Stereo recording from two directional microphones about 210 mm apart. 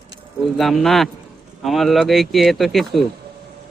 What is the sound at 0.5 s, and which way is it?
Speech, centre (ahead or behind).